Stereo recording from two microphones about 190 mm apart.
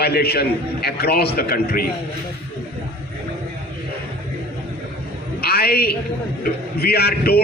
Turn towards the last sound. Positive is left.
turn(degrees=55)  # may be behind; listen again after turning